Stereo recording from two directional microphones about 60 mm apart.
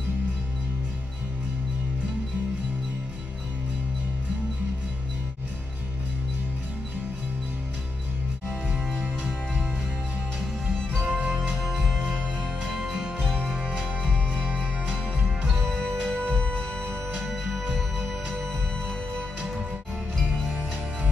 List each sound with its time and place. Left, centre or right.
11.0 s music: centre
13.2 s music: centre
13.5 s music: centre
15.6 s music: centre
17.3 s music: centre
20.2 s music: centre